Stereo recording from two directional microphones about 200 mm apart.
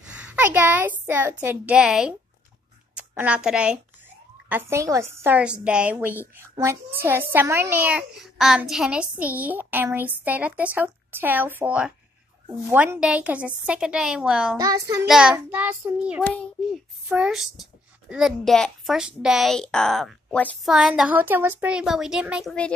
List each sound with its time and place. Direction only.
0.3 s a child's voice: 10° right (ahead or behind)
14.6 s a child's voice: 15° right (ahead or behind)
15.0 s a child's voice: 5° right (ahead or behind)